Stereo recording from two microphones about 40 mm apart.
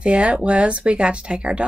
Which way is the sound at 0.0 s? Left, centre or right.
Right.